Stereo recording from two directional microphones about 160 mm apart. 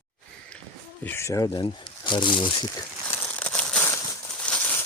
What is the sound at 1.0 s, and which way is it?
Speech, 15° left (ahead or behind).